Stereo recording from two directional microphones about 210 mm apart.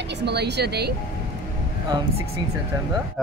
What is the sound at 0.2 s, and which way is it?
Speech, 50° right (ahead or behind).